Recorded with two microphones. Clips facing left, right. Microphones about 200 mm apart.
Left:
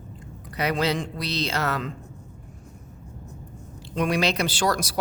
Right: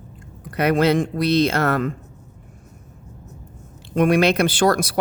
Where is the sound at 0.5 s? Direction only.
55° right (ahead or behind).